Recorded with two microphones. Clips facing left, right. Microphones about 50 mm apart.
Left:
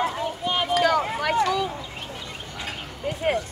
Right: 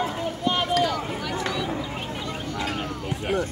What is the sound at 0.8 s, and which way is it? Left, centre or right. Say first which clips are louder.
Speech: left 5 dB; left.